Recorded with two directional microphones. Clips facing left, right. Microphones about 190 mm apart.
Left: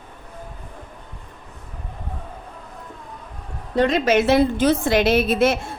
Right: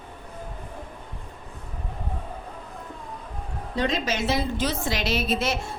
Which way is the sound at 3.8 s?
60° left (ahead or behind).